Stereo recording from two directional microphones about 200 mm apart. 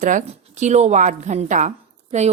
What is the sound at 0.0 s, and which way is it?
A woman's voice, 40° right (ahead or behind).